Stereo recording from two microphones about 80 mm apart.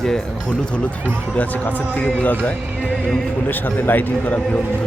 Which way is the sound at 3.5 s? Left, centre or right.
Left.